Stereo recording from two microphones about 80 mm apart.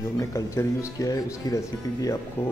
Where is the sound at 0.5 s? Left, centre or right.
Left.